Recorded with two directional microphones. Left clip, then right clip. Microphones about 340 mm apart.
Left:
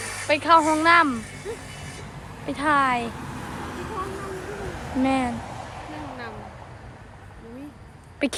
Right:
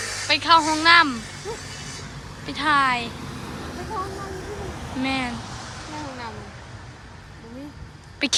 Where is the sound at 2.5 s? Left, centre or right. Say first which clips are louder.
Right 1 dB; centre.